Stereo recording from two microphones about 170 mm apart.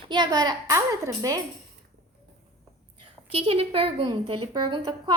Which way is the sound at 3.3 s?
35° right (ahead or behind).